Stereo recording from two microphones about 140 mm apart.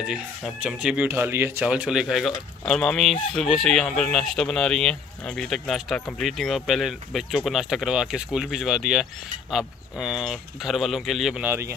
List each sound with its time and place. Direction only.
0.1 s speech: 5° right (ahead or behind)
11.4 s speech: 15° right (ahead or behind)